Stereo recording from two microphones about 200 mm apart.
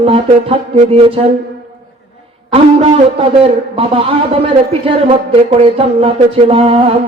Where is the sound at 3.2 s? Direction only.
25° right (ahead or behind).